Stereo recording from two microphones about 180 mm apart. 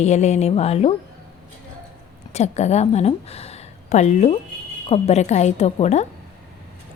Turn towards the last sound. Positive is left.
turn(degrees=35)  # may be behind; listen again after turning